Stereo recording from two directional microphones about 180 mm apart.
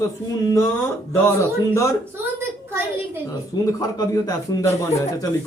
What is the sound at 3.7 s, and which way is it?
Speech, 20° left (ahead or behind).